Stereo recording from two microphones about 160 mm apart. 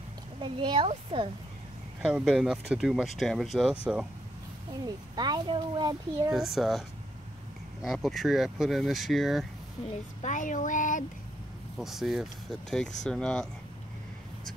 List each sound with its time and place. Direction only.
0.4 s speech: 30° right (ahead or behind)
2.0 s speech: 5° right (ahead or behind)
4.8 s a child's voice: 25° right (ahead or behind)
6.3 s speech: centre (ahead or behind)
7.8 s speech: centre (ahead or behind)
10.2 s speech: 55° left (ahead or behind)
11.8 s speech: centre (ahead or behind)